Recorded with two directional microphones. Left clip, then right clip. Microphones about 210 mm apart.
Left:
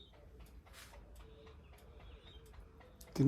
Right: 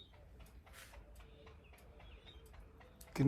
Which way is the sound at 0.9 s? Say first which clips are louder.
Left 2 dB; 50° left (ahead or behind).